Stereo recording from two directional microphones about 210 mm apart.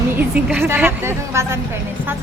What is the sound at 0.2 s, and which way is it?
Speech, 5° right (ahead or behind).